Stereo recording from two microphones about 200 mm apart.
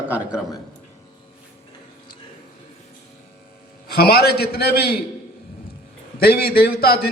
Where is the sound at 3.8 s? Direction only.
50° left (ahead or behind).